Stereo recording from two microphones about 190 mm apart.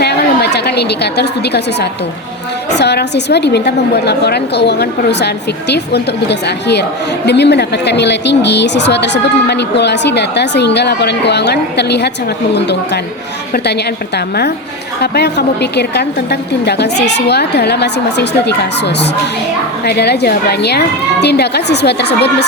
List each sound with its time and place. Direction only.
0.0 s a sound: 60° left (ahead or behind)
2.7 s a woman's voice: 60° left (ahead or behind)
15.0 s a woman's voice: 60° left (ahead or behind)